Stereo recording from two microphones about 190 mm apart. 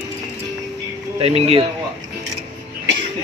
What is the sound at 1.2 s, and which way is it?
Speech, 35° right (ahead or behind).